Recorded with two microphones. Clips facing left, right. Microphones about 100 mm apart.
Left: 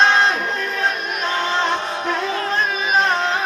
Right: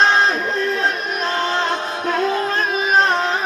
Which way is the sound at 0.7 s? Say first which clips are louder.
Right 1 dB; 35° right (ahead or behind).